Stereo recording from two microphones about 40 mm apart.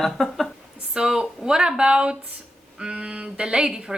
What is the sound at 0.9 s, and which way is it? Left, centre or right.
Speech, right.